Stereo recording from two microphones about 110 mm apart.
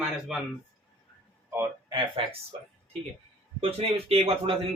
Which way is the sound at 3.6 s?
60° right (ahead or behind).